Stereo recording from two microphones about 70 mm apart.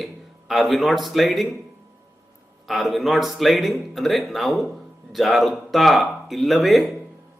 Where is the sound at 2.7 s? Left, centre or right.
Centre.